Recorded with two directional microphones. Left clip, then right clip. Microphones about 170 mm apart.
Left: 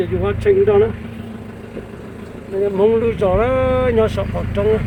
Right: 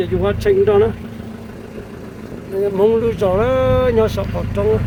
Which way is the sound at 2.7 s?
15° right (ahead or behind).